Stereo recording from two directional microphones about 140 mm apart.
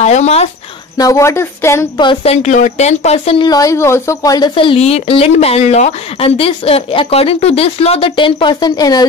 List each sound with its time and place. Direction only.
0.0 s speech: 55° left (ahead or behind)
0.9 s speech: 25° left (ahead or behind)
2.2 s speech: 55° left (ahead or behind)
3.4 s speech: 25° left (ahead or behind)
4.6 s speech: 45° left (ahead or behind); by 9.0 s 30° left (ahead or behind)